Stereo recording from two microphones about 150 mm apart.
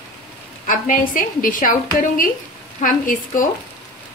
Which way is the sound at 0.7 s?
65° left (ahead or behind).